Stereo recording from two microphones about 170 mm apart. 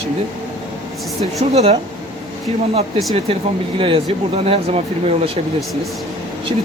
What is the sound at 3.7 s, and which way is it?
Speech, 30° right (ahead or behind).